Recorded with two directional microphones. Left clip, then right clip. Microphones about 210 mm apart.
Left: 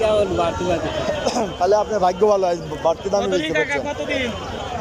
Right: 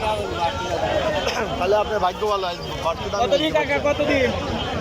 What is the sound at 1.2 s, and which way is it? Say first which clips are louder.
Speech: left 3 dB; 20° left (ahead or behind).